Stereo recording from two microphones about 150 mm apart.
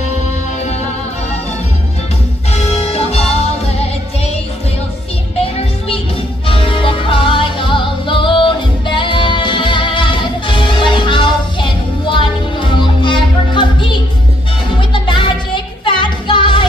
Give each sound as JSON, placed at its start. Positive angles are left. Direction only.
{"t": 2.5, "sound": "music", "side_deg": 45}
{"t": 6.4, "sound": "music", "side_deg": 35}